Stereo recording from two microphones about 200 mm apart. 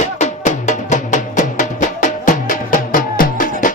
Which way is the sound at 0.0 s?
35° left (ahead or behind).